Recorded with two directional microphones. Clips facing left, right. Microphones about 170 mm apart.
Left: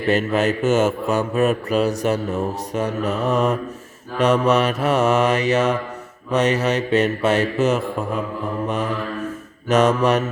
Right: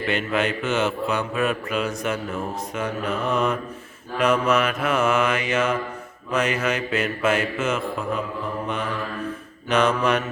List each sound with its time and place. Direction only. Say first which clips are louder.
0.0 s speech: left 5 dB; 40° left (ahead or behind)